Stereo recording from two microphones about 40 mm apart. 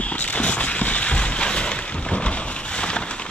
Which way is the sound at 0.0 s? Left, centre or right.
Left.